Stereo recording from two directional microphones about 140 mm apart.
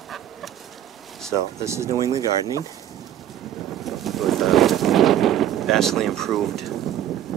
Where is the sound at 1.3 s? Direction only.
20° right (ahead or behind).